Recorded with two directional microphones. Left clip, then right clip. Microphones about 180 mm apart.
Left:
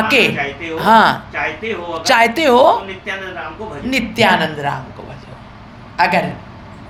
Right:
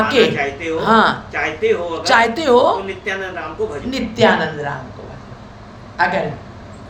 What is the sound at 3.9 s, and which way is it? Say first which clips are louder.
Speech: left 2 dB; 45° left (ahead or behind).